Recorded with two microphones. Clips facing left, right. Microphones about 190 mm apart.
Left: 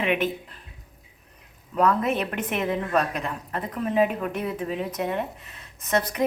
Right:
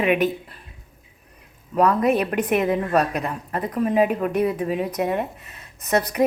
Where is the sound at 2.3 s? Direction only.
15° right (ahead or behind).